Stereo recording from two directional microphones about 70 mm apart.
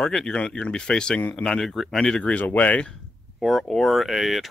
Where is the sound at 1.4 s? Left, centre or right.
Centre.